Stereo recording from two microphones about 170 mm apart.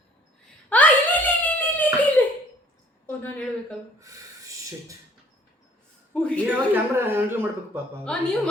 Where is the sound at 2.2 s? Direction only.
10° left (ahead or behind).